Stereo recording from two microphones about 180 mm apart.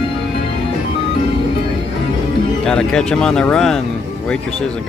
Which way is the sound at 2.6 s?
5° left (ahead or behind).